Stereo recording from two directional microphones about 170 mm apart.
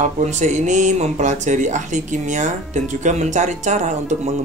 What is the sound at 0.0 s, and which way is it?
Speech, 45° right (ahead or behind).